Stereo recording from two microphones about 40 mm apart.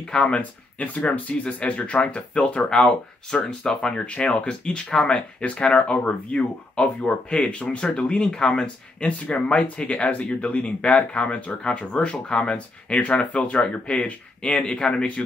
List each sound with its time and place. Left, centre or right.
0.1 s speech: left
0.4 s speech: left